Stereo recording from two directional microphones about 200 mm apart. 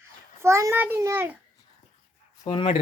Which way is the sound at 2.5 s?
25° left (ahead or behind).